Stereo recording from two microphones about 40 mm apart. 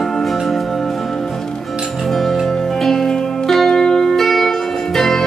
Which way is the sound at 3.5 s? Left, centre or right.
Centre.